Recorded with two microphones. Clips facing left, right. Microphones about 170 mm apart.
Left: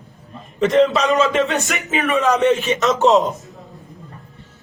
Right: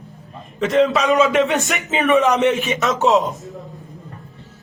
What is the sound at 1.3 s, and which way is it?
Speech, 20° right (ahead or behind).